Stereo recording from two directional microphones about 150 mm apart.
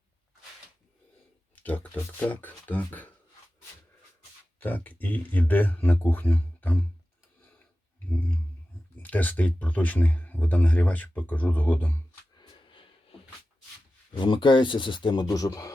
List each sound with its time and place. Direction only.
1.5 s speech: 10° left (ahead or behind)
4.6 s speech: 10° left (ahead or behind)
9.0 s speech: 10° left (ahead or behind)
12.4 s sniff: 35° left (ahead or behind)
14.1 s speech: 35° left (ahead or behind)